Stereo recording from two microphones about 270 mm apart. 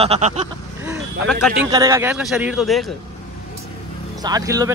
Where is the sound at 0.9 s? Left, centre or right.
Centre.